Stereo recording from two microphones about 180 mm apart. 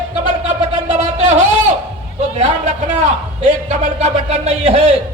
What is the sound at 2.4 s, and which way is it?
A man's voice, 40° right (ahead or behind).